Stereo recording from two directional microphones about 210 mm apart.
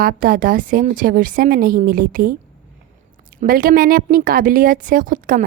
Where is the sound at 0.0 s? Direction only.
40° right (ahead or behind).